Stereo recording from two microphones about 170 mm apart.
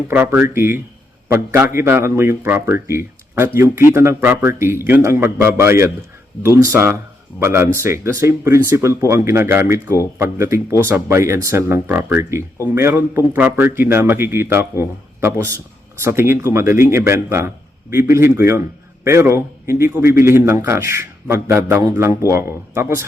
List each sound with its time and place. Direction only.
0.1 s speech: 10° right (ahead or behind)